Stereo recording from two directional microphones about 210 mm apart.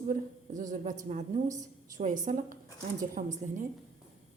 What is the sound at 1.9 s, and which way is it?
A woman's voice, 35° right (ahead or behind).